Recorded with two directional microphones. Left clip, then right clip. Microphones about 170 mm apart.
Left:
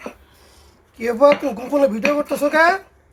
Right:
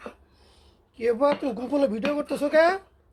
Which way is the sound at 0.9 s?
20° right (ahead or behind).